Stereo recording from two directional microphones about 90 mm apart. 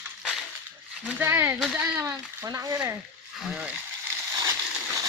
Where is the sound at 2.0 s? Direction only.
35° right (ahead or behind).